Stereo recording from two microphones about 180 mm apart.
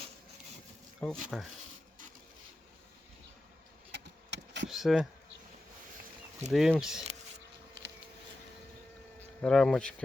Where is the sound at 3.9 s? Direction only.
75° right (ahead or behind).